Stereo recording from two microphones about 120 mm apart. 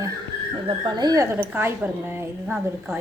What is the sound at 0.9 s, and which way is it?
A woman's voice, 35° right (ahead or behind).